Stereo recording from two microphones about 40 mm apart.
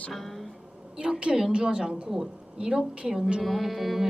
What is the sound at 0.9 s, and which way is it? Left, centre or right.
A woman's voice, right.